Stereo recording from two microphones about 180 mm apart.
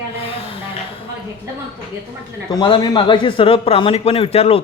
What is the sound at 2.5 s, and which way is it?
A man's voice, 25° left (ahead or behind).